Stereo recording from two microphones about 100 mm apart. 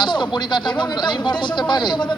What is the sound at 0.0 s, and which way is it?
Speech, 50° left (ahead or behind).